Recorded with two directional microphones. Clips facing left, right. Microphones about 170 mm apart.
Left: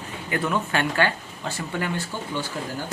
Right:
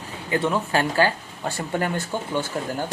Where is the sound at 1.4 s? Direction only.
50° right (ahead or behind).